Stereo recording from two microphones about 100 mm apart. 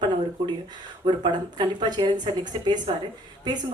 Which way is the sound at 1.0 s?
50° right (ahead or behind).